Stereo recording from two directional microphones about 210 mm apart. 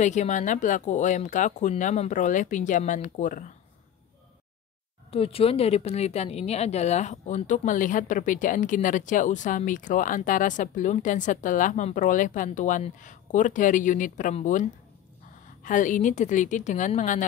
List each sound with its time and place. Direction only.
0.0 s a woman's voice: 35° left (ahead or behind)
5.1 s a woman's voice: 25° left (ahead or behind)